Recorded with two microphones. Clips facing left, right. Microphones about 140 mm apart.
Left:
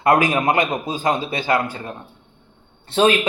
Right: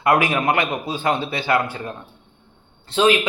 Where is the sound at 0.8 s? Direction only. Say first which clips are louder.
Left 1 dB; 40° left (ahead or behind).